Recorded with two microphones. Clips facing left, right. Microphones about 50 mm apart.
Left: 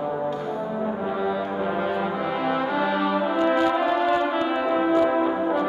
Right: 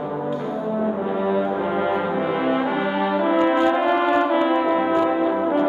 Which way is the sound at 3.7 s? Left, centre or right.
Right.